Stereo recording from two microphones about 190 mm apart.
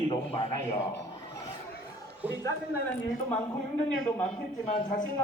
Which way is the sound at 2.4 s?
10° left (ahead or behind).